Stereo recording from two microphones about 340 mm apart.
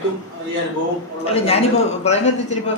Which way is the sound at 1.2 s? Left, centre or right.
Centre.